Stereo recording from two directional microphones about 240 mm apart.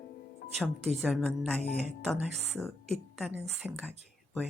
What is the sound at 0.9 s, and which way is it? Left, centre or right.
Speech, centre.